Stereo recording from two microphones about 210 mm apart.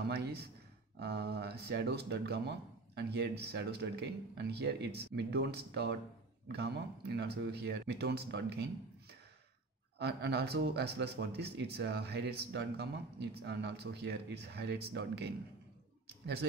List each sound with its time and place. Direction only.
0.1 s speech: 50° right (ahead or behind)
9.9 s speech: 50° right (ahead or behind)